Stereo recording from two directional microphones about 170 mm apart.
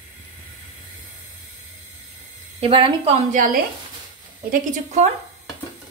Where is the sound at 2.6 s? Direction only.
30° right (ahead or behind).